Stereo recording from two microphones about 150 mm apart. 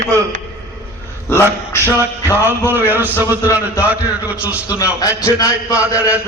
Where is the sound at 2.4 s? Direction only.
15° right (ahead or behind).